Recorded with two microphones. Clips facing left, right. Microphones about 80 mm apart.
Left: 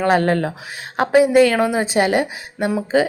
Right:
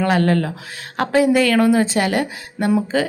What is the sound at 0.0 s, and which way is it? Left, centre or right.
A woman's voice, left.